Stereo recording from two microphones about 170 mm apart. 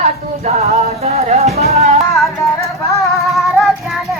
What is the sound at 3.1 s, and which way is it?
Music, centre (ahead or behind).